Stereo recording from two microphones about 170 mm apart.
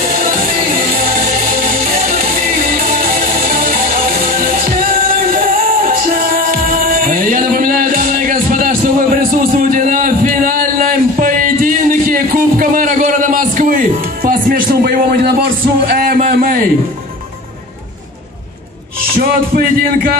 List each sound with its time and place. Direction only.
1.2 s music: 55° right (ahead or behind)
19.1 s music: 55° right (ahead or behind)